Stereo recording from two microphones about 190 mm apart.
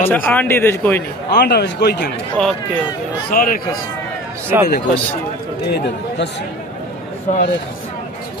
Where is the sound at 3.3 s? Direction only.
45° left (ahead or behind).